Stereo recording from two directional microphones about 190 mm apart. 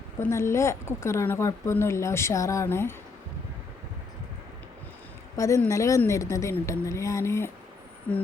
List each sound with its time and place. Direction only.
0.2 s a woman's voice: 15° left (ahead or behind)
5.4 s a woman's voice: 15° left (ahead or behind)